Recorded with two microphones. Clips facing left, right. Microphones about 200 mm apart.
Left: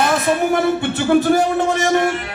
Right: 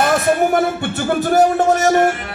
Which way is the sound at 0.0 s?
45° right (ahead or behind).